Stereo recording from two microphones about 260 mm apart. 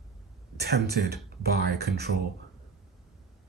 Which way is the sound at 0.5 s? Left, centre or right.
Right.